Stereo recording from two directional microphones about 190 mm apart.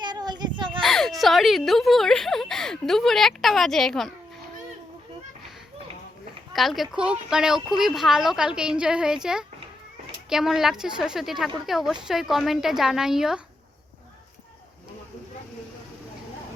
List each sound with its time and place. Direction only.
0.0 s a sound: 20° right (ahead or behind)
0.8 s speech: centre (ahead or behind)
6.5 s speech: centre (ahead or behind)